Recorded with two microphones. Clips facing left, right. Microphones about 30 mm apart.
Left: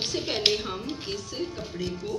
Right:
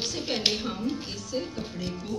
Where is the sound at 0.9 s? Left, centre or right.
Left.